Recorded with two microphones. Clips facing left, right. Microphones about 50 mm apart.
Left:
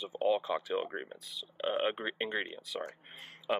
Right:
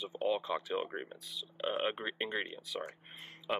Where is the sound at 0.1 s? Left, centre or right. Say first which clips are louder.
Left 4 dB; centre.